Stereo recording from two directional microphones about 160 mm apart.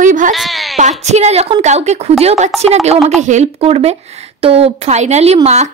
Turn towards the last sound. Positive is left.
turn(degrees=-45)  # may be behind; listen again after turning